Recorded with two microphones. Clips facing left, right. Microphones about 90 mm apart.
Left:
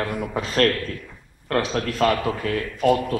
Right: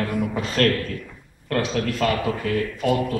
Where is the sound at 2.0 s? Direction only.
45° left (ahead or behind).